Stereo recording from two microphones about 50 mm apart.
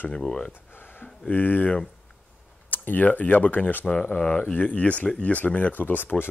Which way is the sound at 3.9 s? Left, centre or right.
Left.